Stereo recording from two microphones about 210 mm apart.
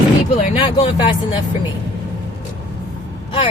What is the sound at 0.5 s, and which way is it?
Speech, 25° left (ahead or behind).